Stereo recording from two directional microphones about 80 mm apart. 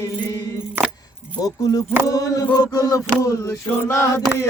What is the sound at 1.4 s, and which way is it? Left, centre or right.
Speech, left.